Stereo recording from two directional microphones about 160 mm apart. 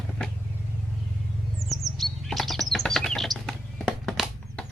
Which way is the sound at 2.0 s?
Centre (ahead or behind).